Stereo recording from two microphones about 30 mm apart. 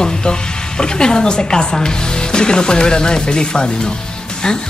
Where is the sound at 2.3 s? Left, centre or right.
Left.